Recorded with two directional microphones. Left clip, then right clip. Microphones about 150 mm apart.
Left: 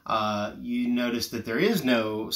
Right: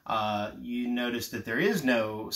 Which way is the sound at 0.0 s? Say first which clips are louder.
Left 3 dB; 10° left (ahead or behind).